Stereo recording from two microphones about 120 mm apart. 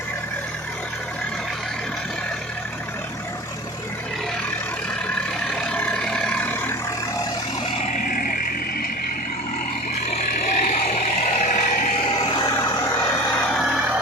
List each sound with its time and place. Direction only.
5.1 s vehicle: 5° left (ahead or behind)
10.4 s vehicle: 90° left
12.4 s vehicle: 30° left (ahead or behind)